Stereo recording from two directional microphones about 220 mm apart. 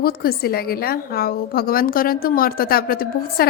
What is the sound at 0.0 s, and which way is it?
A woman's voice, 45° left (ahead or behind).